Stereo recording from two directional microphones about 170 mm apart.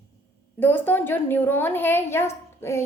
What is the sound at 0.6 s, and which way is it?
A woman's voice, 10° left (ahead or behind).